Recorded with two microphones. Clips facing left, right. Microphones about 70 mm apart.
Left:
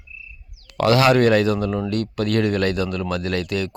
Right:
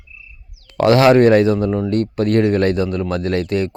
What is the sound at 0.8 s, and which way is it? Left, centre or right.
Speech, right.